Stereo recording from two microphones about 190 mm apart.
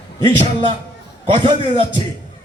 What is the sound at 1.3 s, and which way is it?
Speech, 30° right (ahead or behind).